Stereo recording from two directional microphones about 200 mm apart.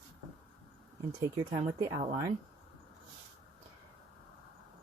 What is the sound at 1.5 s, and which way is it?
Speech, 25° right (ahead or behind).